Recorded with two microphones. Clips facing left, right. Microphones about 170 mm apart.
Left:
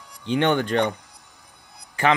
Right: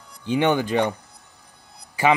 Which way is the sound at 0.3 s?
10° right (ahead or behind).